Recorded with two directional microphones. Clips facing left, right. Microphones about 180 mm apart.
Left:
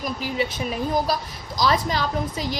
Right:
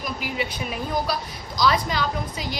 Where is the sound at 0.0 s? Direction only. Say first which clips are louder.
Left 3 dB; 35° left (ahead or behind).